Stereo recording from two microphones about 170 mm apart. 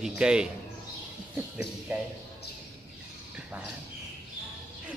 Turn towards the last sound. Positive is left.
turn(degrees=-10)  # may be behind; listen again after turning